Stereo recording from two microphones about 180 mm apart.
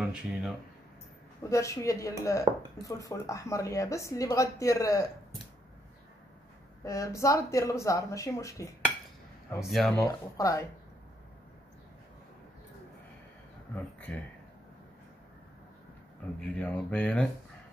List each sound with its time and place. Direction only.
0.0 s speech: 5° right (ahead or behind)
1.5 s speech: 15° left (ahead or behind)
6.8 s speech: 15° left (ahead or behind)
9.7 s speech: centre (ahead or behind)
10.0 s speech: 20° left (ahead or behind)
16.3 s speech: 5° left (ahead or behind)